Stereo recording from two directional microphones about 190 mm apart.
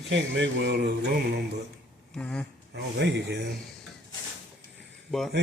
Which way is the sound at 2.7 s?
65° right (ahead or behind).